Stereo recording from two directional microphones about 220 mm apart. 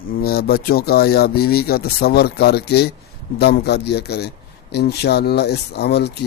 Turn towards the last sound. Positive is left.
turn(degrees=50)  # may be behind; listen again after turning